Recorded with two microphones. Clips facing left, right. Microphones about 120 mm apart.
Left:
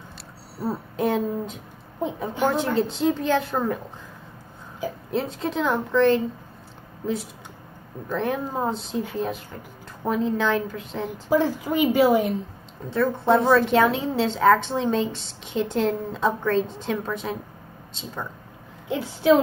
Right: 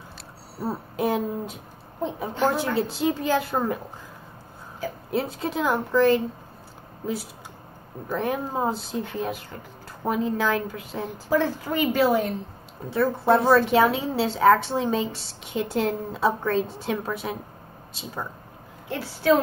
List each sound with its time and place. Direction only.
0.6 s a woman's voice: centre (ahead or behind)
5.1 s a woman's voice: 5° right (ahead or behind)
8.1 s a woman's voice: 5° right (ahead or behind)
11.1 s a woman's voice: 15° left (ahead or behind)
12.9 s a woman's voice: 5° right (ahead or behind)
18.9 s a woman's voice: 20° left (ahead or behind)